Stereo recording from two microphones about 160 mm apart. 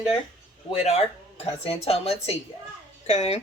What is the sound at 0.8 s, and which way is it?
Speech, 40° left (ahead or behind).